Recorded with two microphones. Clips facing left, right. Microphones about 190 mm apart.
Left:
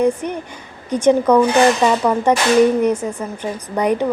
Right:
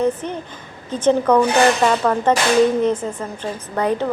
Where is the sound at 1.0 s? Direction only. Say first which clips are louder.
Left 2 dB; 10° left (ahead or behind).